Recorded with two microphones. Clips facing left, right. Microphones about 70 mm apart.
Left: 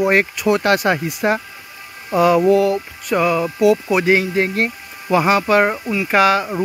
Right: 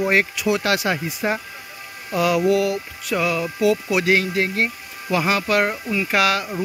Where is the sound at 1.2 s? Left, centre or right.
Left.